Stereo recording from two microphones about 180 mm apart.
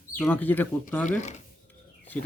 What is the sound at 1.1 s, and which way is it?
Speech, 40° left (ahead or behind).